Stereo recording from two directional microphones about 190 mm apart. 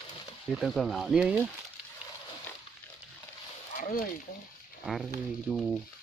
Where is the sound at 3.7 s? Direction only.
45° left (ahead or behind).